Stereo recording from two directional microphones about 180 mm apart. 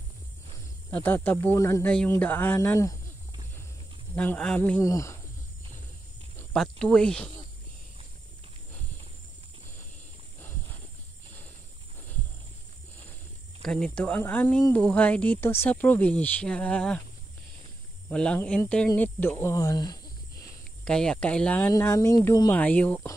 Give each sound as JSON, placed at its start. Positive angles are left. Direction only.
{"t": 0.8, "sound": "speech", "side_deg": 10}
{"t": 4.1, "sound": "speech", "side_deg": 10}
{"t": 6.5, "sound": "speech", "side_deg": 0}
{"t": 13.6, "sound": "speech", "side_deg": 5}
{"t": 18.1, "sound": "speech", "side_deg": 5}
{"t": 20.8, "sound": "speech", "side_deg": 5}